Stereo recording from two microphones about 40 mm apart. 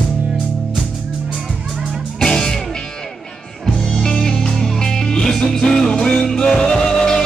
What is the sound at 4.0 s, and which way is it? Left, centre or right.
Music, centre.